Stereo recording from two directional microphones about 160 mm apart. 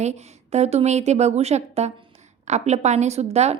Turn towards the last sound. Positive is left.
turn(degrees=-40)  # may be behind; listen again after turning